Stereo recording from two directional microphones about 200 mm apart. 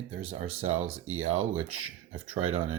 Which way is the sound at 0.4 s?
90° right.